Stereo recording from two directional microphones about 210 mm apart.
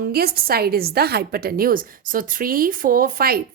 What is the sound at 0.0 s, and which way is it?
A woman's voice, 45° right (ahead or behind).